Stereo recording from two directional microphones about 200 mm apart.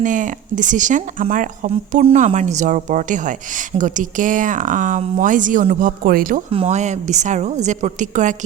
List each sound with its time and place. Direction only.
0.0 s speech: 40° right (ahead or behind)
6.5 s speech: 30° right (ahead or behind)